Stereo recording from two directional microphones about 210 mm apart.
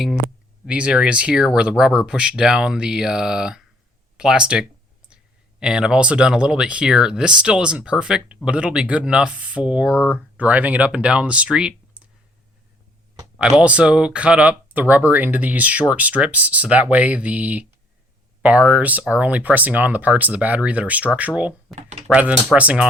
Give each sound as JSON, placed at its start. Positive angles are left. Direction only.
{"t": 0.6, "sound": "speech", "side_deg": -5}
{"t": 13.6, "sound": "speech", "side_deg": -5}
{"t": 21.8, "sound": "speech", "side_deg": -30}
{"t": 22.1, "sound": "speech", "side_deg": -5}